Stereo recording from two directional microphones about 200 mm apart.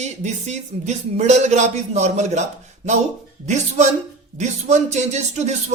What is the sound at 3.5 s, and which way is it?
Speech, 35° right (ahead or behind).